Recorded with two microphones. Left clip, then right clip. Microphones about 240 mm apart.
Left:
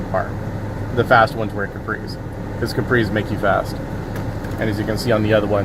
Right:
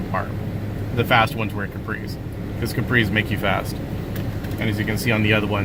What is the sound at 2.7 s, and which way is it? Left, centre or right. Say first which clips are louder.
Speech: left 1 dB; right.